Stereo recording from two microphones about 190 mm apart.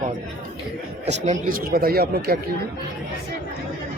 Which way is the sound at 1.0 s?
40° right (ahead or behind).